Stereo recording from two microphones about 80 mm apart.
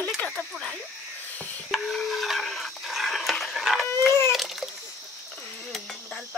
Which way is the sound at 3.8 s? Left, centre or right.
Left.